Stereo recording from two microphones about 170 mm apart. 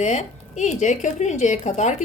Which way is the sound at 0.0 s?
45° left (ahead or behind).